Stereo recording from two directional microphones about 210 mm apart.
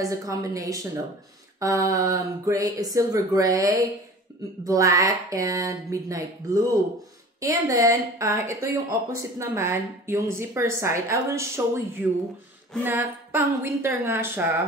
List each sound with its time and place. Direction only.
0.0 s speech: 15° right (ahead or behind)